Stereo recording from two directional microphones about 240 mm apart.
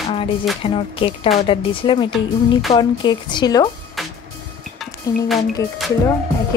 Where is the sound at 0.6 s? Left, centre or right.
Left.